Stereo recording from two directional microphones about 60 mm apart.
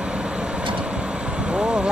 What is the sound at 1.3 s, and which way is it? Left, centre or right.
Vehicle, centre.